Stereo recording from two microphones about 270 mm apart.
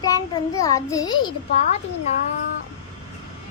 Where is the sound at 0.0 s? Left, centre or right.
Centre.